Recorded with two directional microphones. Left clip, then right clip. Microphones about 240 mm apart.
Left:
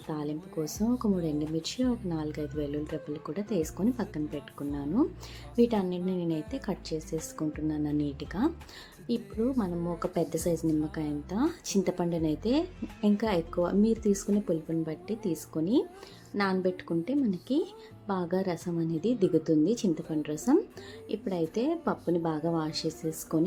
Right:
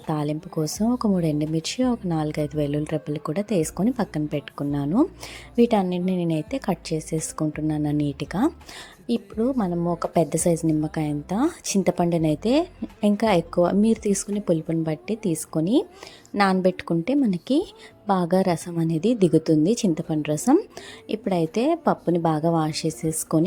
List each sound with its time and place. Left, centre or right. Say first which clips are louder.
0.1 s a woman's voice: right 8 dB; right